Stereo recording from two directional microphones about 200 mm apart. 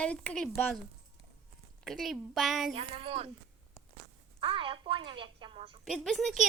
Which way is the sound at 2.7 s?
30° right (ahead or behind).